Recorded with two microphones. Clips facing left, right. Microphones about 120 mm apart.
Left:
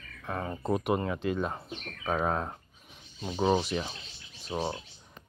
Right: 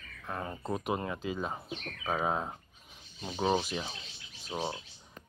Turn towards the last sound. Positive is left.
turn(degrees=15)  # may be behind; listen again after turning